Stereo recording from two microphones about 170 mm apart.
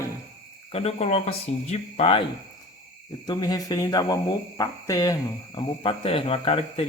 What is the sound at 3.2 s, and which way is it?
Speech, 25° left (ahead or behind).